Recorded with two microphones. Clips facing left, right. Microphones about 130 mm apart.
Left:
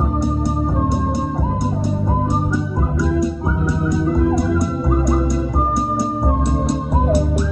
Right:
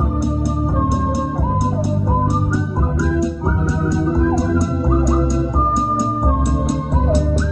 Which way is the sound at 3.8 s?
25° right (ahead or behind).